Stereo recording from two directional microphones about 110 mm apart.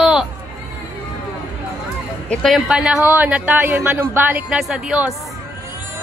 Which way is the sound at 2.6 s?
5° right (ahead or behind).